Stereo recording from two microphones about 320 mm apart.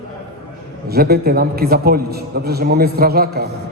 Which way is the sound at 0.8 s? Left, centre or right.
Right.